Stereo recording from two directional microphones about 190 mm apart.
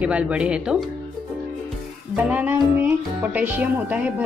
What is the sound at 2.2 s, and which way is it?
Speech, 5° right (ahead or behind).